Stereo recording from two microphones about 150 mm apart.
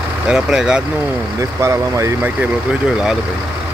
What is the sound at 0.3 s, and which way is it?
Speech, 5° right (ahead or behind).